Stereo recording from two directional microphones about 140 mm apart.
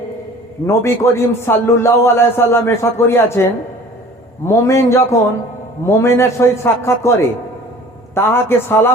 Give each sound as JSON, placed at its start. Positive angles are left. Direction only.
{"t": 0.7, "sound": "a man's voice", "side_deg": 20}
{"t": 4.4, "sound": "a man's voice", "side_deg": 20}